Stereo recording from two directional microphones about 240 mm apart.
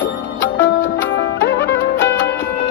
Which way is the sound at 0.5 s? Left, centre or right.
Left.